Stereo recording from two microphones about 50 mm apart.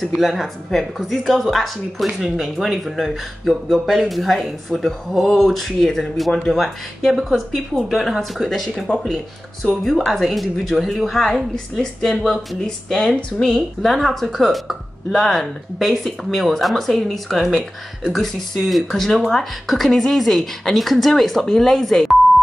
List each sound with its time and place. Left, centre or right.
0.2 s speech: centre
8.7 s speech: centre
9.0 s speech: centre